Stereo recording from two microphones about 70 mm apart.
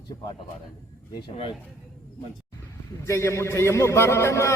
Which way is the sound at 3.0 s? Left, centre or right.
Left.